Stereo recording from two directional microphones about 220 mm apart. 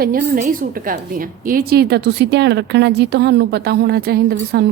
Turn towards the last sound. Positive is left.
turn(degrees=-45)  # may be behind; listen again after turning